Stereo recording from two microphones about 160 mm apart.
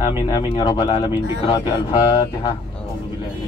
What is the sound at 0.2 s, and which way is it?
Speech, 25° left (ahead or behind).